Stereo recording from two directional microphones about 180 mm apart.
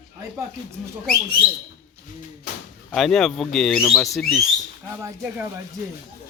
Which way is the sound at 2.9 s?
Centre (ahead or behind).